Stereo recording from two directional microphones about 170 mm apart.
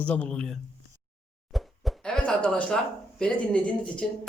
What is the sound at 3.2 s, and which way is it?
Speech, 5° left (ahead or behind).